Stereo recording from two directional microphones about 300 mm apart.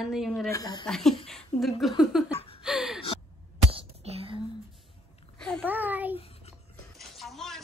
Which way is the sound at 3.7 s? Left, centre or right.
Centre.